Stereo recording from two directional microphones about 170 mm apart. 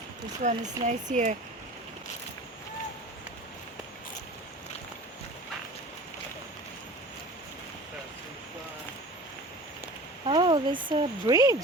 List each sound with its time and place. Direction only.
0.4 s speech: 45° right (ahead or behind)
10.2 s speech: 30° right (ahead or behind)